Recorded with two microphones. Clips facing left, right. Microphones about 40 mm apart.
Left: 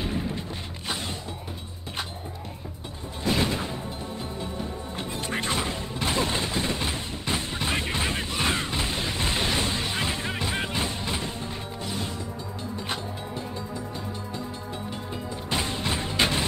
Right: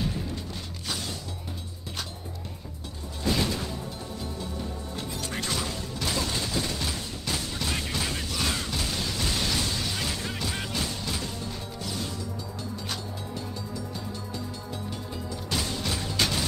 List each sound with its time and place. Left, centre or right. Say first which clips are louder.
0.0 s music: left 2 dB; left
3.3 s music: left 2 dB; left
4.9 s music: left 4 dB; left
15.5 s a sound: left 3 dB; left